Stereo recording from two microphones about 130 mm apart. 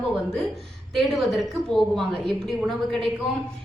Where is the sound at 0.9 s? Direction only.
Centre (ahead or behind).